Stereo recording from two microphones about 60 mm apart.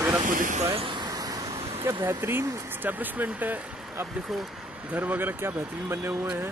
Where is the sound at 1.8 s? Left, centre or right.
Right.